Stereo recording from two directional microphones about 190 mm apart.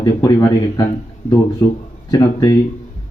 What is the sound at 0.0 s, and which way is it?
Speech, 20° left (ahead or behind).